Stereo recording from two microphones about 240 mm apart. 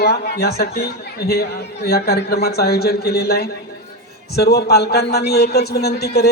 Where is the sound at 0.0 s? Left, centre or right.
Left.